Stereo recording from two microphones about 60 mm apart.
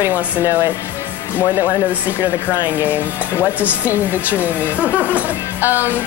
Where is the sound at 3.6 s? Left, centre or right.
Right.